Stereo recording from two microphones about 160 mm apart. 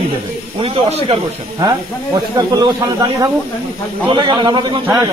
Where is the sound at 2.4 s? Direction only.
25° right (ahead or behind).